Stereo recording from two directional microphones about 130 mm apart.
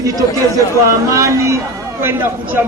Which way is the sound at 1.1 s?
25° right (ahead or behind).